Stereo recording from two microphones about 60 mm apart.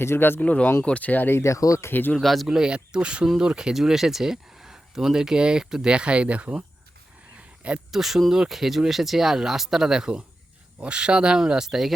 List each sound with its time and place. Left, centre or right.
0.0 s speech: left
0.3 s speech: left
1.4 s speech: left
1.9 s speech: left
2.1 s speech: centre
2.6 s speech: centre
7.3 s a sound: right
7.9 s speech: centre